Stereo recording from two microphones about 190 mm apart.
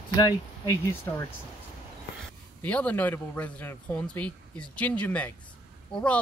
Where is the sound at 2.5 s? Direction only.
5° left (ahead or behind).